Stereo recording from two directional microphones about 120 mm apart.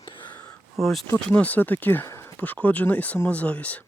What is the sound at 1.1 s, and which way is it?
Speech, 15° left (ahead or behind).